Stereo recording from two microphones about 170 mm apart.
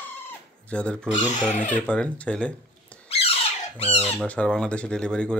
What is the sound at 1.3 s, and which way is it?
Speech, 45° left (ahead or behind).